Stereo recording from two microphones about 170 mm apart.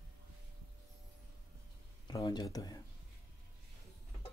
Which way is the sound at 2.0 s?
25° left (ahead or behind).